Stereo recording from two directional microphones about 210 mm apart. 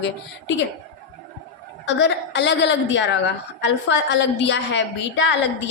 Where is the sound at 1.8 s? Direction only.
55° left (ahead or behind).